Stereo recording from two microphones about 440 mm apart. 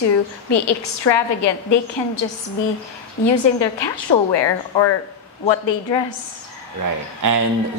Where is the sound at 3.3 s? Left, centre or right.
Left.